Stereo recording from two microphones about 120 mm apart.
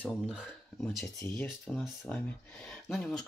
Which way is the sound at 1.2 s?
15° left (ahead or behind).